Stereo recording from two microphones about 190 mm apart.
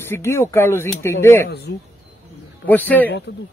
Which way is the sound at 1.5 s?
60° left (ahead or behind).